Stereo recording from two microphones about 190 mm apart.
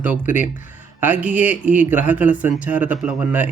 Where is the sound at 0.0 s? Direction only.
10° right (ahead or behind).